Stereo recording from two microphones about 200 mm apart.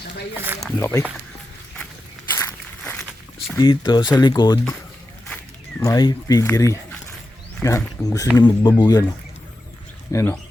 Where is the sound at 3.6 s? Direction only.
20° left (ahead or behind).